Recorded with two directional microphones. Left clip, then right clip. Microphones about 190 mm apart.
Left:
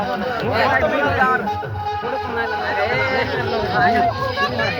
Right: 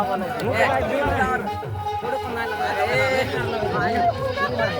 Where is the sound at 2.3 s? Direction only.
60° right (ahead or behind).